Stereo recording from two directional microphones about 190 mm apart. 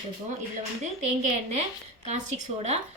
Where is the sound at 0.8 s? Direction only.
35° right (ahead or behind).